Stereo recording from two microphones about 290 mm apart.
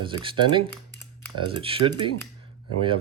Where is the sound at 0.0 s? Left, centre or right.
Centre.